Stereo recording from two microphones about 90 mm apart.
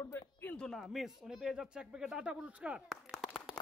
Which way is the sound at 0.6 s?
Centre (ahead or behind).